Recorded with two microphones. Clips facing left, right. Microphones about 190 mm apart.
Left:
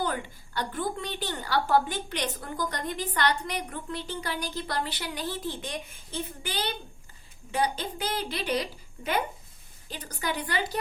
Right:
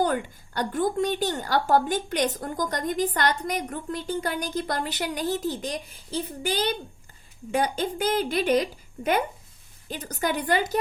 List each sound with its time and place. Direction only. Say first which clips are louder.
0.0 s a woman's voice: right 6 dB; 45° right (ahead or behind)
9.9 s a woman's voice: right 5 dB; 45° right (ahead or behind)